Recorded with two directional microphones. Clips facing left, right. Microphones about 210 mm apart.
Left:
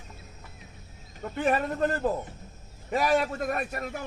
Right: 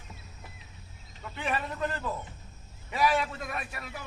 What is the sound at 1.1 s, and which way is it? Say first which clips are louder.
A man's voice: left 7 dB; 45° left (ahead or behind).